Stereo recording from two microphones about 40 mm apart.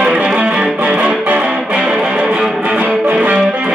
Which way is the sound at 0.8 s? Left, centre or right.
Right.